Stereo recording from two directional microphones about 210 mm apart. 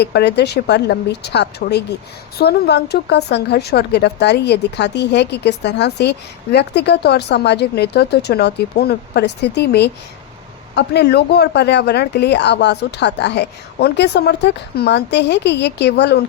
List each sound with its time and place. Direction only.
0.0 s speech: 50° left (ahead or behind)